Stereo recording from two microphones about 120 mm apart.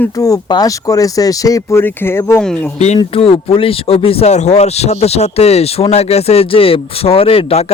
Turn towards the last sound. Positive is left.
turn(degrees=55)  # may be behind; listen again after turning